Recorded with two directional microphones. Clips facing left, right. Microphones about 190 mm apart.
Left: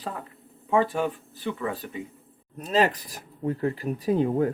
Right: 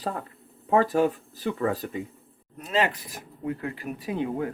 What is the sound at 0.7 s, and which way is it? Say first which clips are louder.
Speech: right 2 dB; 40° right (ahead or behind).